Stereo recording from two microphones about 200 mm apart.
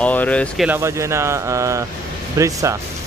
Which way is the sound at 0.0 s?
5° left (ahead or behind).